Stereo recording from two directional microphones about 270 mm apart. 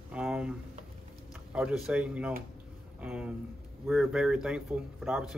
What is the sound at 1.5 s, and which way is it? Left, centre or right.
Speech, centre.